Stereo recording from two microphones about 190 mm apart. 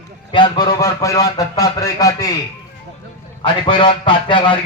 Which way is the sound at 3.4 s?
25° left (ahead or behind).